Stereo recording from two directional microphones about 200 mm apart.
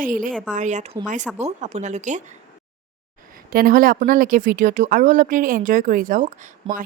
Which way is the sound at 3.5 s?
45° right (ahead or behind).